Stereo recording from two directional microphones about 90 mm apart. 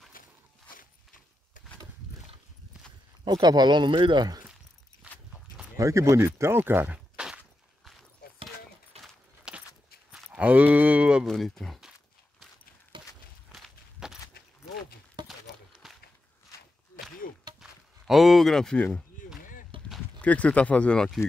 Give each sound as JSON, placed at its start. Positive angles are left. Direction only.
{"t": 3.3, "sound": "speech", "side_deg": -50}
{"t": 5.0, "sound": "walk", "side_deg": -15}
{"t": 5.8, "sound": "speech", "side_deg": -35}
{"t": 9.5, "sound": "a sound", "side_deg": -10}
{"t": 11.2, "sound": "speech", "side_deg": 5}
{"t": 12.9, "sound": "walk", "side_deg": -65}
{"t": 13.5, "sound": "walk", "side_deg": -5}
{"t": 15.2, "sound": "clip-clop", "side_deg": -55}
{"t": 15.8, "sound": "walk", "side_deg": 0}
{"t": 17.6, "sound": "a sound", "side_deg": -5}
{"t": 20.2, "sound": "speech", "side_deg": 15}